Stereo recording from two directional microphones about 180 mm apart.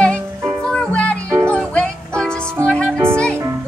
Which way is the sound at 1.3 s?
15° right (ahead or behind).